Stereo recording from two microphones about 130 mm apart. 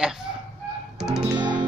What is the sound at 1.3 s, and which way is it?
Music, 35° right (ahead or behind).